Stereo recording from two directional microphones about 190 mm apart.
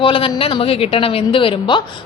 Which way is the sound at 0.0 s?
25° left (ahead or behind).